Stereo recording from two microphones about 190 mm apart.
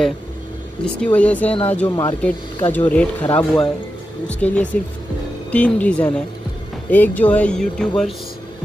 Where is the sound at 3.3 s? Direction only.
25° left (ahead or behind).